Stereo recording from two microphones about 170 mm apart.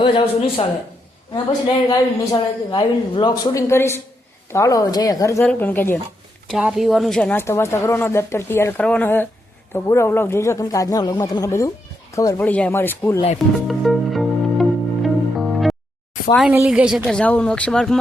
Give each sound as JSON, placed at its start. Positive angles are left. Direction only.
{"t": 0.0, "sound": "speech", "side_deg": 30}
{"t": 1.9, "sound": "a woman's voice", "side_deg": 25}
{"t": 6.5, "sound": "a woman's voice", "side_deg": -5}
{"t": 13.7, "sound": "music", "side_deg": 0}
{"t": 16.5, "sound": "speech", "side_deg": -10}